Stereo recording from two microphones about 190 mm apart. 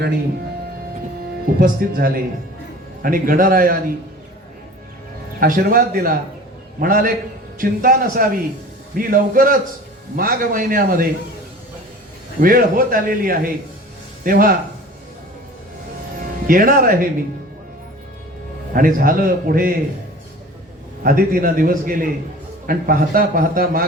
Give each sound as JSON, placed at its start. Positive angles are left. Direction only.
{"t": 1.5, "sound": "a man's voice", "side_deg": -50}
{"t": 5.4, "sound": "a man's voice", "side_deg": -50}
{"t": 12.4, "sound": "a man's voice", "side_deg": -50}
{"t": 16.5, "sound": "a man's voice", "side_deg": -50}
{"t": 18.7, "sound": "a man's voice", "side_deg": -50}
{"t": 21.0, "sound": "a man's voice", "side_deg": -50}